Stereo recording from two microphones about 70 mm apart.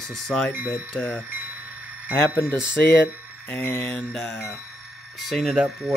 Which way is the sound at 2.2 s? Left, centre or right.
Left.